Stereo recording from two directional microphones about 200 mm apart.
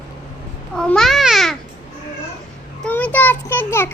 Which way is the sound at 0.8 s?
5° left (ahead or behind).